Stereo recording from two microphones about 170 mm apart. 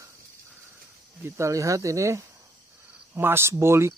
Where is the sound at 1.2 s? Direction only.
15° right (ahead or behind).